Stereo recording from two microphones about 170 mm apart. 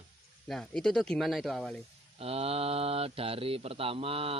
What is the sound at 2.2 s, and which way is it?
Speech, 35° right (ahead or behind).